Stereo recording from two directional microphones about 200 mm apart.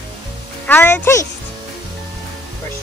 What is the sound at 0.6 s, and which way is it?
Speech, 10° left (ahead or behind).